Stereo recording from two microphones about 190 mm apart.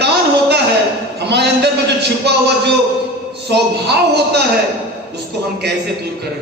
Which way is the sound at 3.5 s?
60° right (ahead or behind).